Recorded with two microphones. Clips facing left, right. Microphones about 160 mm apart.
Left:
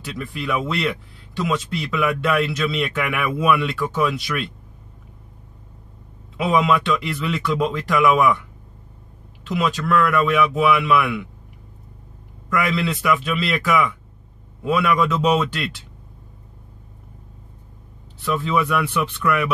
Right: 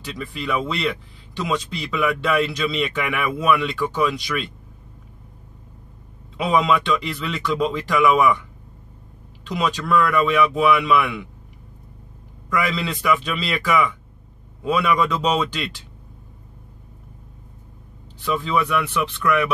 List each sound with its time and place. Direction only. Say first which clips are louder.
0.2 s speech: even; 5° left (ahead or behind)
6.3 s speech: left 1 dB; 5° left (ahead or behind)
9.5 s speech: left 1 dB; centre (ahead or behind)
12.4 s speech: left 2 dB; 5° left (ahead or behind)
18.2 s speech: left 1 dB; centre (ahead or behind)